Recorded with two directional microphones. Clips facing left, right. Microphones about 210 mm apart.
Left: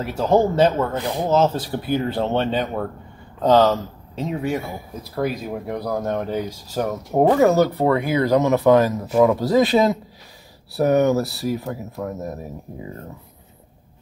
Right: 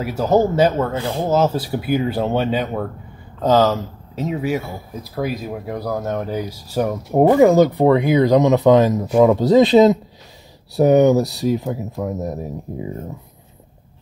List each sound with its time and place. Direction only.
0.0 s speech: 5° right (ahead or behind)
0.9 s speech: 15° left (ahead or behind)
1.3 s speech: 10° right (ahead or behind)